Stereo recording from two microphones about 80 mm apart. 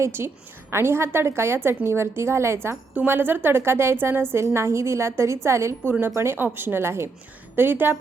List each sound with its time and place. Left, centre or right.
0.0 s a woman's voice: right
2.9 s a woman's voice: right